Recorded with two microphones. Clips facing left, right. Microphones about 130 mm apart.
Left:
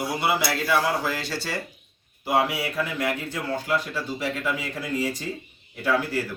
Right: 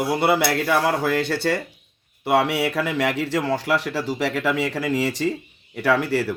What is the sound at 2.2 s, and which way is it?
A man's voice, 70° right (ahead or behind).